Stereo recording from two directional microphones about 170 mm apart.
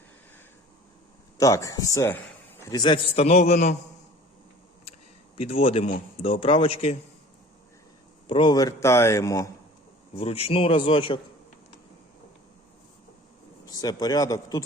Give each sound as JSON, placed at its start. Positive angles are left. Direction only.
{"t": 1.4, "sound": "speech", "side_deg": 20}
{"t": 3.2, "sound": "a man's voice", "side_deg": 40}
{"t": 5.4, "sound": "a man's voice", "side_deg": 35}
{"t": 8.3, "sound": "speech", "side_deg": 30}
{"t": 10.2, "sound": "a man's voice", "side_deg": 35}
{"t": 13.7, "sound": "speech", "side_deg": 20}